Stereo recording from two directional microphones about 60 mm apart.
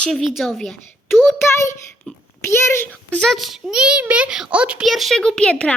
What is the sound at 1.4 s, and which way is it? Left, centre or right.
A child's voice, left.